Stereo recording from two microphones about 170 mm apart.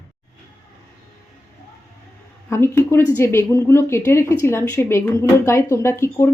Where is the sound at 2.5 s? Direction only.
15° left (ahead or behind).